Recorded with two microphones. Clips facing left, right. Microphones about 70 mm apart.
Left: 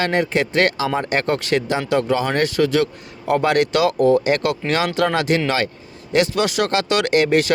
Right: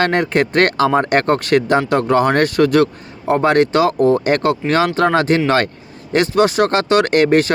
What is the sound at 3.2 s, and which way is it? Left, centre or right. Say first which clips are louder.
Speech: right 4 dB; right.